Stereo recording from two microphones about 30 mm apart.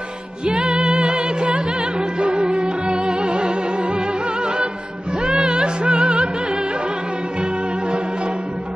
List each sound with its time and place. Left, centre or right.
0.5 s music: right